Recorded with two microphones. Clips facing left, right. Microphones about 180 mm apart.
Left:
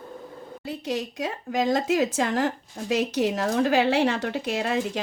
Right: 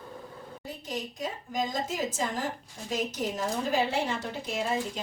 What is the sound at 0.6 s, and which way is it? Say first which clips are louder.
Speech: left 8 dB; 80° left.